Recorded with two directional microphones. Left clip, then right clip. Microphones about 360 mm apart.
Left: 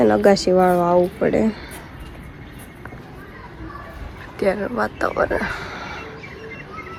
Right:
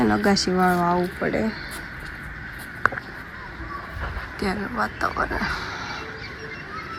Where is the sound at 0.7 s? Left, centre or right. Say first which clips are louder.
Left 6 dB; left.